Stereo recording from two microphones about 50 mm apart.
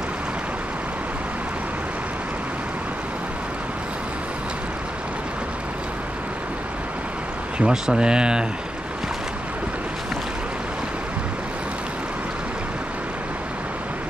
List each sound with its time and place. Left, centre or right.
7.5 s speech: centre